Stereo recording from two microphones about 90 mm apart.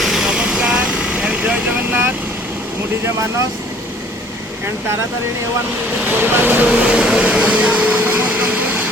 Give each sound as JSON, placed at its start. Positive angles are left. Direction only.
{"t": 0.0, "sound": "vehicle", "side_deg": -5}
{"t": 6.1, "sound": "speech", "side_deg": -25}
{"t": 6.7, "sound": "a sound", "side_deg": -10}